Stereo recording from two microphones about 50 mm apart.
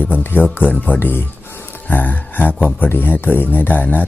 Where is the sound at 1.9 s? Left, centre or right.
Left.